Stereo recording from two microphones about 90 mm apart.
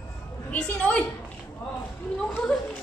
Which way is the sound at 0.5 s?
15° left (ahead or behind).